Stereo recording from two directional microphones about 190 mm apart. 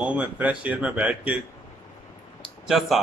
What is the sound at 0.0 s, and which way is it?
A woman's voice, 5° right (ahead or behind).